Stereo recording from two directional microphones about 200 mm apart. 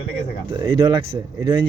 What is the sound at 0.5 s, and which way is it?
Speech, 20° right (ahead or behind).